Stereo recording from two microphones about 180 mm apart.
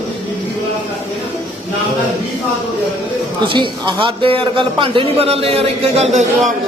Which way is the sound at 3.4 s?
25° right (ahead or behind).